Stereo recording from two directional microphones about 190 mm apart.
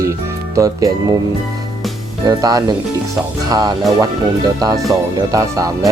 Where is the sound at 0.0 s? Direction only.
15° right (ahead or behind).